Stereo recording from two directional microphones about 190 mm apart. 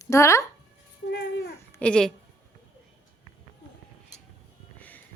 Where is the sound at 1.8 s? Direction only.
5° left (ahead or behind).